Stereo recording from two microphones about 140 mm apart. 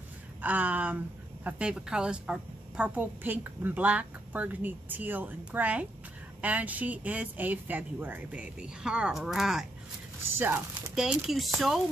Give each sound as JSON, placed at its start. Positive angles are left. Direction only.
{"t": 0.4, "sound": "a woman's voice", "side_deg": -10}
{"t": 10.3, "sound": "a woman's voice", "side_deg": -15}
{"t": 11.0, "sound": "speech", "side_deg": 0}